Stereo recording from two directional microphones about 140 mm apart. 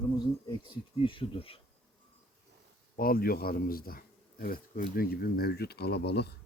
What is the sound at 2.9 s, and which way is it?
Speech, 90° left.